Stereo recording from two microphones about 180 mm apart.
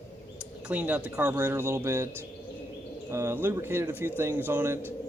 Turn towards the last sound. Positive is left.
turn(degrees=-10)  # may be behind; listen again after turning